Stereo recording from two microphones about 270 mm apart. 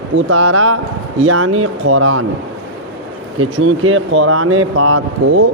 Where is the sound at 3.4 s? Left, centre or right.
Right.